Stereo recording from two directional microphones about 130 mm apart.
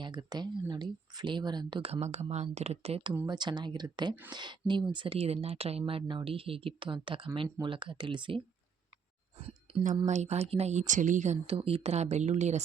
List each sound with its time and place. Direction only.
0.0 s speech: 30° right (ahead or behind)
9.7 s a sound: 45° right (ahead or behind)
10.1 s speech: 60° right (ahead or behind)